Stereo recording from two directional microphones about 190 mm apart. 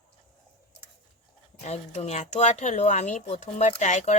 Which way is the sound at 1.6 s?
35° left (ahead or behind).